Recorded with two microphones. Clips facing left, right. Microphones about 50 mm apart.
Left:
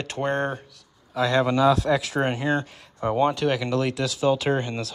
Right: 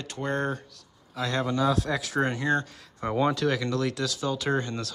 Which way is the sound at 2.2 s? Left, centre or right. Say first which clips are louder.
Left 2 dB; left.